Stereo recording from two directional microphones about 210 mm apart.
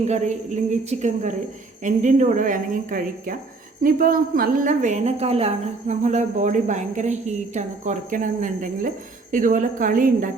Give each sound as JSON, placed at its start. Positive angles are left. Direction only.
{"t": 0.0, "sound": "a woman's voice", "side_deg": -35}